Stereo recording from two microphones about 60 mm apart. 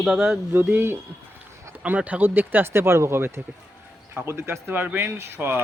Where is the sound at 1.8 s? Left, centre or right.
Right.